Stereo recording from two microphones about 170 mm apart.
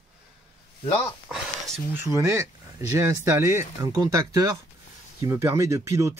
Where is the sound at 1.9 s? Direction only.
15° right (ahead or behind).